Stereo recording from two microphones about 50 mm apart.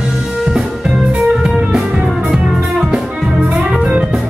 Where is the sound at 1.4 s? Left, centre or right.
Centre.